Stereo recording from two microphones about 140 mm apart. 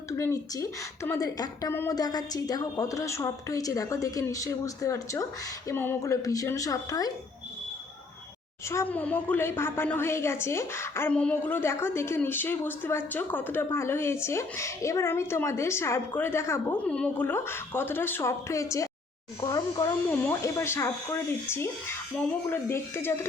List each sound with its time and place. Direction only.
0.2 s a woman's voice: 20° left (ahead or behind)
8.7 s a woman's voice: 15° left (ahead or behind)